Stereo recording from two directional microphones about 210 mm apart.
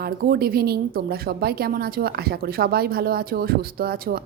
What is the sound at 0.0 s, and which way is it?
A woman's voice, 50° right (ahead or behind).